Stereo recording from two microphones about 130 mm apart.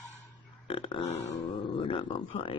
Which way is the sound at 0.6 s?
40° left (ahead or behind).